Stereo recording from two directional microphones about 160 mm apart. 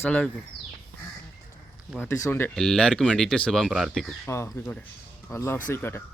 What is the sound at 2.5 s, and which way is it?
Speech, 5° left (ahead or behind).